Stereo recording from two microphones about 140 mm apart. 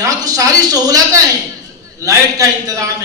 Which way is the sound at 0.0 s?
25° right (ahead or behind).